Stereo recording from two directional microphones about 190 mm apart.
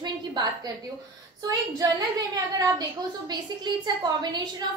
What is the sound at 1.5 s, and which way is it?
A woman's voice, 20° right (ahead or behind).